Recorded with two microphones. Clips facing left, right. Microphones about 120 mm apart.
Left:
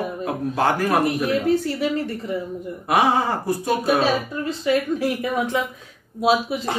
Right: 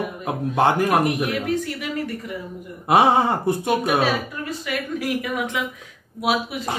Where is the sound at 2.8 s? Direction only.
25° right (ahead or behind).